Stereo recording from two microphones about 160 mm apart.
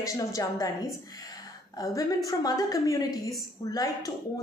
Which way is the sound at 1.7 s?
20° left (ahead or behind).